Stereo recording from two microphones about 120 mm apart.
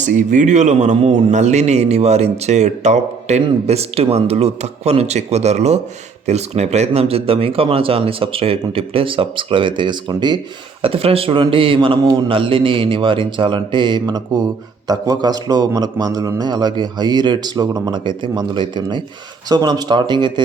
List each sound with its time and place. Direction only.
0.0 s a man's voice: 90° right; by 3.4 s 70° right (ahead or behind)
3.7 s speech: 55° right (ahead or behind); by 10.4 s 40° right (ahead or behind)
10.8 s a man's voice: 50° right (ahead or behind)